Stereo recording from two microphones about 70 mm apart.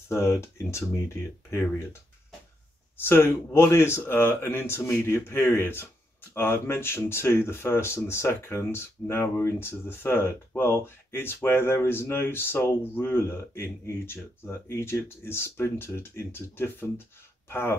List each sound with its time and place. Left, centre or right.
0.1 s speech: left
3.0 s speech: left